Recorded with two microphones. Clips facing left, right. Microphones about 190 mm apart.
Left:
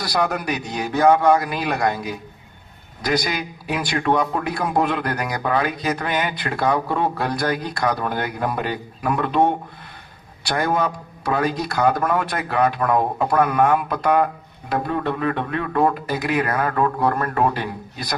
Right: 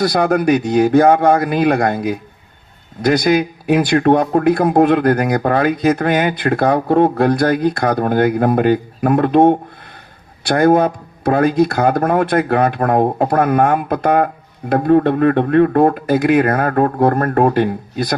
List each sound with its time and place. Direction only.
0.0 s a man's voice: 55° right (ahead or behind)